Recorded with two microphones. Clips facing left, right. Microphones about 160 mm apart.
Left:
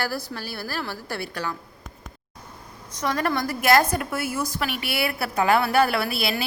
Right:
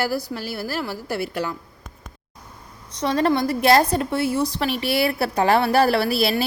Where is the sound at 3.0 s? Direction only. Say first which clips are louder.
Right 5 dB; 25° right (ahead or behind).